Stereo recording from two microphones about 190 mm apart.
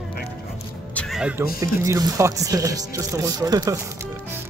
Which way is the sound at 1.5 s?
20° right (ahead or behind).